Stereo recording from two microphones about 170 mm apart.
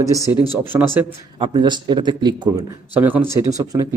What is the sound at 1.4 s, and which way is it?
A man's voice, 30° right (ahead or behind).